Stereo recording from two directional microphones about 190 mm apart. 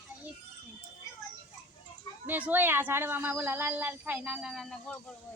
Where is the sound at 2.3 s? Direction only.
10° right (ahead or behind).